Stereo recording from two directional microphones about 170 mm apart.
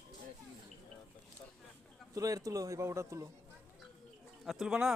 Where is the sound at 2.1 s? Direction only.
20° right (ahead or behind).